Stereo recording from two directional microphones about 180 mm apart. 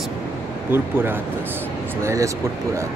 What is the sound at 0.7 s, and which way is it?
Speech, 10° right (ahead or behind).